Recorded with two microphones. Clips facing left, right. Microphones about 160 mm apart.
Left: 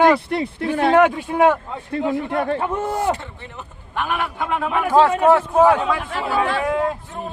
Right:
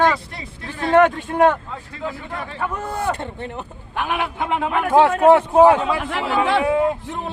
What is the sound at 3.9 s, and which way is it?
Speech, 15° right (ahead or behind).